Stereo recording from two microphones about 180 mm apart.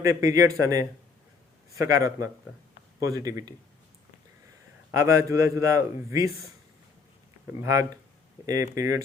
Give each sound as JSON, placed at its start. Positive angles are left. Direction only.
{"t": 0.0, "sound": "a man's voice", "side_deg": -20}
{"t": 4.9, "sound": "a man's voice", "side_deg": -15}
{"t": 7.6, "sound": "a man's voice", "side_deg": -15}